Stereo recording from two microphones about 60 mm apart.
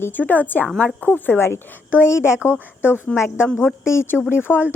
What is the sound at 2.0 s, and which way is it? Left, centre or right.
A woman's voice, left.